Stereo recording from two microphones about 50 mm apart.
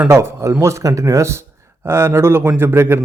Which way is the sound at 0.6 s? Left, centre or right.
Right.